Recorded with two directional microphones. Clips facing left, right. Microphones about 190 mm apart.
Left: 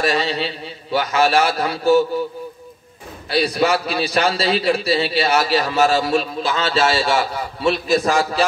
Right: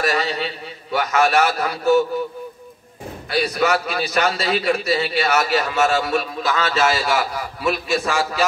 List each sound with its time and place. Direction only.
0.0 s a man's voice: 30° left (ahead or behind)
3.3 s a man's voice: 30° left (ahead or behind)